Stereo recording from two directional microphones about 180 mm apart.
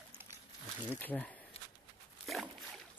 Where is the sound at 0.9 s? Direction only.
10° left (ahead or behind).